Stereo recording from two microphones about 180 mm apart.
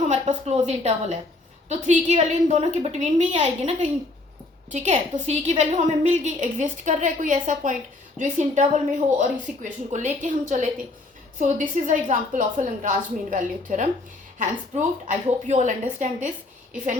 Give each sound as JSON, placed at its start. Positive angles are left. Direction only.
{"t": 0.1, "sound": "a woman's voice", "side_deg": -40}